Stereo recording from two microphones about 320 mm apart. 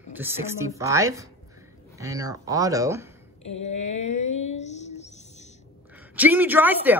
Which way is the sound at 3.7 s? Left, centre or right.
Left.